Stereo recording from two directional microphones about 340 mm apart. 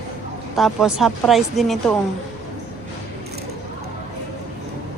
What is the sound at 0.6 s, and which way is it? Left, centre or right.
Speech, centre.